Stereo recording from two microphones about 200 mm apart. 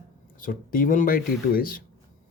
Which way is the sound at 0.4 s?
45° left (ahead or behind).